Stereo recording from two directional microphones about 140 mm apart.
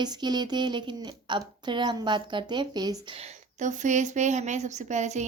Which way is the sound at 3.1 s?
50° right (ahead or behind).